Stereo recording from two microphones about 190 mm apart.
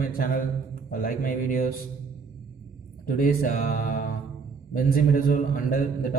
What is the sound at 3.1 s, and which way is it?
A man's voice, 50° left (ahead or behind).